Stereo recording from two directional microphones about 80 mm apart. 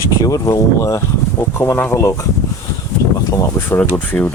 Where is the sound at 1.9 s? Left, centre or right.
Left.